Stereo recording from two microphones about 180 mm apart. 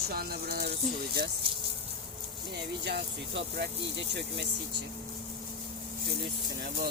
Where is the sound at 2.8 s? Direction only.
70° right (ahead or behind).